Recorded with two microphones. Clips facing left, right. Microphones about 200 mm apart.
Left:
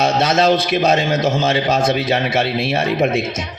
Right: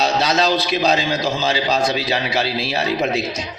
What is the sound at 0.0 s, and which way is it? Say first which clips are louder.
A man's voice: left 3 dB; 55° left (ahead or behind).